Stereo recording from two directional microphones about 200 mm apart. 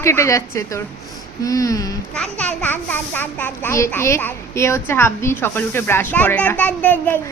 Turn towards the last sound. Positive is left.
turn(degrees=10)  # may be behind; listen again after turning